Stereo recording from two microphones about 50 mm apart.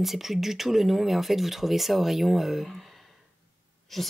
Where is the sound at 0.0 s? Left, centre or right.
Centre.